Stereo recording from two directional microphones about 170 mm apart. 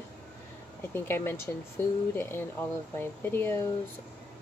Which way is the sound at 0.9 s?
15° left (ahead or behind).